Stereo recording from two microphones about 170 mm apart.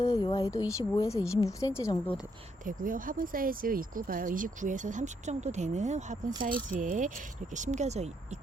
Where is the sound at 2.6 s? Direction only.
50° right (ahead or behind).